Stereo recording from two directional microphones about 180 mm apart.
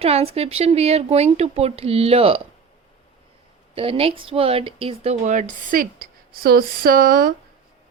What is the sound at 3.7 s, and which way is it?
Speech, 30° right (ahead or behind).